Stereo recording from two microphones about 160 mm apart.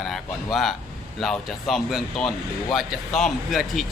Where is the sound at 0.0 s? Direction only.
Centre (ahead or behind).